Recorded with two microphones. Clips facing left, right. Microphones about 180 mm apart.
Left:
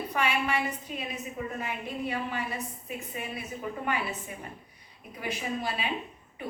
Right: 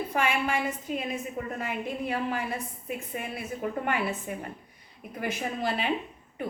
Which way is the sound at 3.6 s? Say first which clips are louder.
Right 3 dB; 55° right (ahead or behind).